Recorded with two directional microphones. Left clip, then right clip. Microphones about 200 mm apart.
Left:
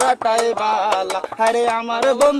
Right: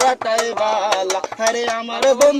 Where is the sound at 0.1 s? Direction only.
20° left (ahead or behind).